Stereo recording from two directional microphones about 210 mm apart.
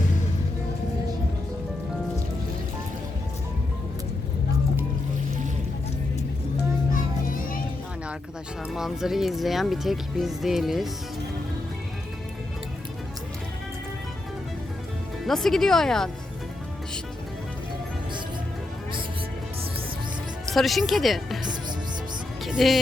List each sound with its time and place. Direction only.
6.9 s music: 40° left (ahead or behind)
8.7 s speech: centre (ahead or behind)
15.2 s speech: centre (ahead or behind)
20.5 s speech: centre (ahead or behind)
22.4 s speech: centre (ahead or behind)